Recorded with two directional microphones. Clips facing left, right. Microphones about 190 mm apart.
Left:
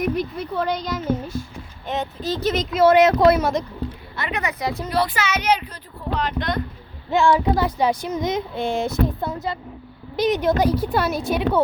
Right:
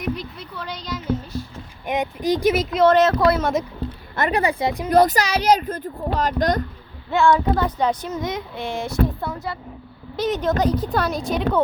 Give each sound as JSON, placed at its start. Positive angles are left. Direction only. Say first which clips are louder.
{"t": 0.0, "sound": "speech", "louder": "left 5 dB", "side_deg": 50}
{"t": 1.9, "sound": "speech", "louder": "right 4 dB", "side_deg": -15}
{"t": 4.3, "sound": "speech", "louder": "right 4 dB", "side_deg": -30}
{"t": 4.9, "sound": "speech", "louder": "right 7 dB", "side_deg": -45}
{"t": 7.1, "sound": "speech", "louder": "even", "side_deg": 15}